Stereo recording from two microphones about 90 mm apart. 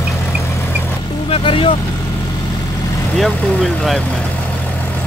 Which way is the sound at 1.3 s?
85° left.